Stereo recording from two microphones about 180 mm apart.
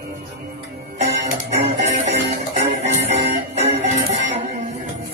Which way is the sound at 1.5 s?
35° right (ahead or behind).